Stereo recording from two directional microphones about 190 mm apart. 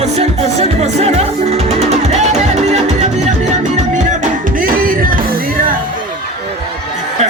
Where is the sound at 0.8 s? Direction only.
35° right (ahead or behind).